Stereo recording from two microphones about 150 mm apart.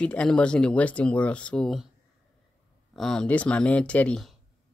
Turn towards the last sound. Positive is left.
turn(degrees=5)  # may be behind; listen again after turning